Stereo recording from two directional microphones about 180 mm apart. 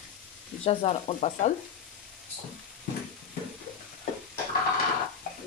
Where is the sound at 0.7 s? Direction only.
35° left (ahead or behind).